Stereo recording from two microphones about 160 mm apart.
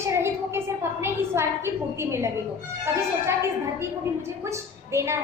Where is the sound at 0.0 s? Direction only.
15° right (ahead or behind).